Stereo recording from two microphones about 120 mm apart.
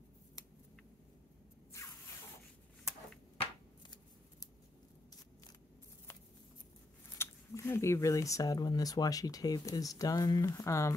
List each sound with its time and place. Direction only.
1.7 s zipper: 25° left (ahead or behind)
7.2 s speech: 20° left (ahead or behind)